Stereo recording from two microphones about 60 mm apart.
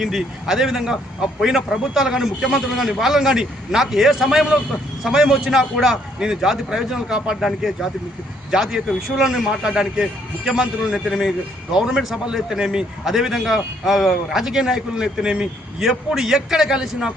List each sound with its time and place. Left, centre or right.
0.0 s a man's voice: centre
8.4 s a man's voice: centre
11.7 s a man's voice: centre